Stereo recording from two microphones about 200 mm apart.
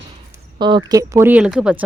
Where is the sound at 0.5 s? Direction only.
25° right (ahead or behind); by 1.8 s 5° right (ahead or behind).